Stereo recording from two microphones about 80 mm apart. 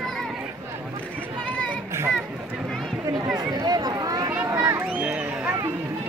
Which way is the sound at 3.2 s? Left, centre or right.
Centre.